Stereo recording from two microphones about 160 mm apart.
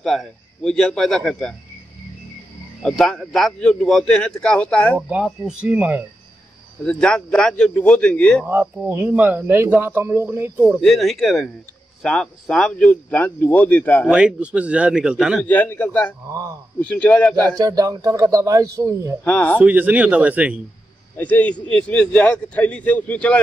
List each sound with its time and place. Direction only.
0.0 s a man's voice: centre (ahead or behind)
2.8 s a man's voice: 5° left (ahead or behind)
4.9 s speech: 10° right (ahead or behind)
6.8 s a man's voice: 5° left (ahead or behind)
8.5 s speech: 15° right (ahead or behind)
10.8 s a man's voice: centre (ahead or behind)
14.1 s a man's voice: 5° right (ahead or behind)
15.4 s a man's voice: 10° left (ahead or behind)
16.3 s speech: 20° right (ahead or behind)
16.8 s a man's voice: 10° left (ahead or behind)
17.6 s speech: 20° right (ahead or behind)
19.2 s a man's voice: 10° left (ahead or behind)
19.6 s speech: 10° right (ahead or behind)
21.2 s a man's voice: 10° left (ahead or behind)